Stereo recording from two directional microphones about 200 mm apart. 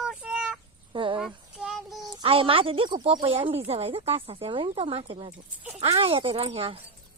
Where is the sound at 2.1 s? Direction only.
25° right (ahead or behind).